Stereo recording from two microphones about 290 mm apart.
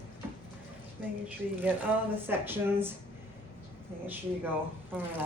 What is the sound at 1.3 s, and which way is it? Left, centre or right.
Speech, centre.